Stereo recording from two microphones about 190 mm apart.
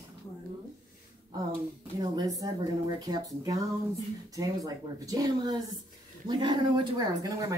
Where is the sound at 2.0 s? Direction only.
20° right (ahead or behind).